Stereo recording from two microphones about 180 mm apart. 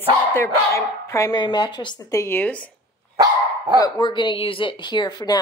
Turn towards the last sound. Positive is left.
turn(degrees=20)  # may be behind; listen again after turning